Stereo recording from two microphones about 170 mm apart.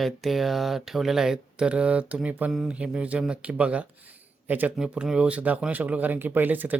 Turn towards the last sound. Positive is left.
turn(degrees=-10)  # may be behind; listen again after turning